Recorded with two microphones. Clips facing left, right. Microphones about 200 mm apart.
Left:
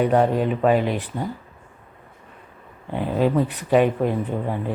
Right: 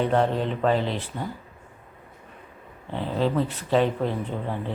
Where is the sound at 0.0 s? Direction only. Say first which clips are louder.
Left 4 dB; 10° left (ahead or behind).